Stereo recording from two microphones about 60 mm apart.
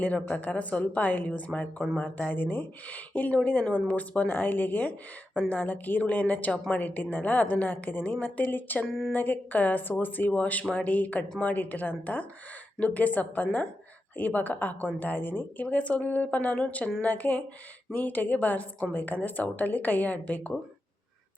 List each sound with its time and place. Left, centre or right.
0.0 s a woman's voice: left
8.9 s speech: centre
9.1 s a woman's voice: left
15.6 s a woman's voice: left